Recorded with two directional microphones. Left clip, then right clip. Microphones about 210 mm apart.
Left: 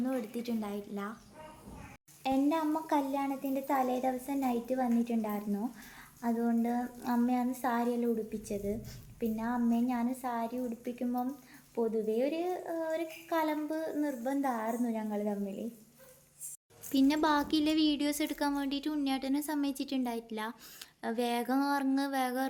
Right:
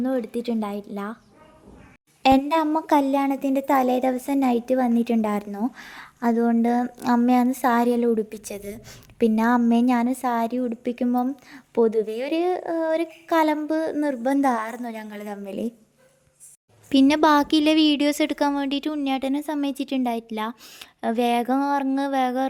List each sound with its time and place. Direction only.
0.0 s a woman's voice: 35° right (ahead or behind)
2.2 s a woman's voice: 50° right (ahead or behind)
16.9 s a woman's voice: 40° right (ahead or behind)